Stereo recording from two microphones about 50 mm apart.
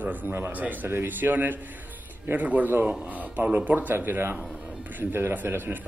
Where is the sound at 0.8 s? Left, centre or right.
Right.